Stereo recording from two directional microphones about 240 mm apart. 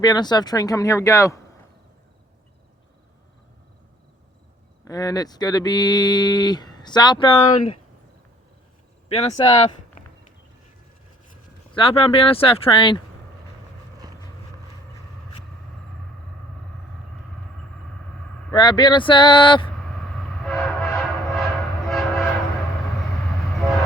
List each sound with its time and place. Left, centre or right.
0.0 s speech: centre
4.9 s speech: centre
9.0 s speech: left
11.7 s speech: left
18.5 s speech: centre
20.1 s train: centre